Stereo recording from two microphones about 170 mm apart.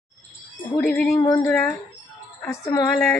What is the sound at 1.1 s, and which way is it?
Speech, 15° left (ahead or behind).